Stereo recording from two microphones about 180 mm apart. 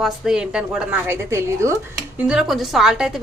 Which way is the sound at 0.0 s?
5° right (ahead or behind).